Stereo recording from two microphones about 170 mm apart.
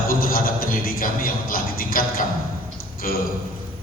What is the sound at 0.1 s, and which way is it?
A man's voice, 55° left (ahead or behind).